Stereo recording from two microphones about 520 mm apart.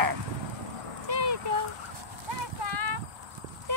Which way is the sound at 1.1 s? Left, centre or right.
Right.